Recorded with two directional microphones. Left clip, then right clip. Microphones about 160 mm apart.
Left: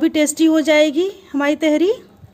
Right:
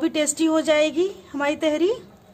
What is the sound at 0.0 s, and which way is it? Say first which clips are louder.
A woman's voice: left 6 dB; 40° left (ahead or behind).